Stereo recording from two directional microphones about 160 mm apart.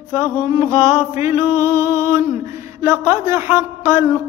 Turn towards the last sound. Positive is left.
turn(degrees=-15)  # may be behind; listen again after turning